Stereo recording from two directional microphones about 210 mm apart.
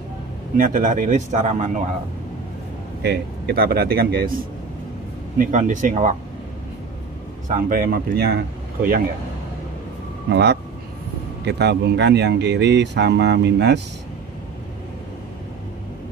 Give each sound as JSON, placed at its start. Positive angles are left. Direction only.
{"t": 0.6, "sound": "speech", "side_deg": -40}
{"t": 3.0, "sound": "a man's voice", "side_deg": -50}
{"t": 7.4, "sound": "a man's voice", "side_deg": -40}
{"t": 10.3, "sound": "a man's voice", "side_deg": -55}